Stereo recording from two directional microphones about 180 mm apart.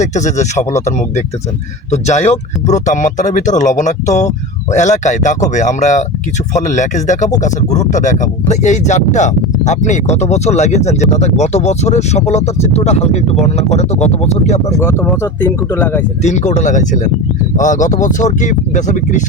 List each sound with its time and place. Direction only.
0.0 s speech: 40° left (ahead or behind)
14.8 s speech: 15° left (ahead or behind)
16.2 s speech: 40° left (ahead or behind)